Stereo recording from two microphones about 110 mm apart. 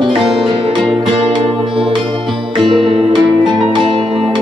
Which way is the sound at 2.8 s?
50° right (ahead or behind).